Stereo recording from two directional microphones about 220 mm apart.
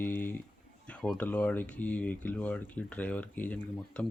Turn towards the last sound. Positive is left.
turn(degrees=5)  # may be behind; listen again after turning